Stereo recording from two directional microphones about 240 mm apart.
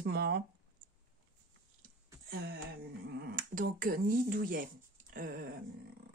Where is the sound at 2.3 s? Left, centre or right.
Right.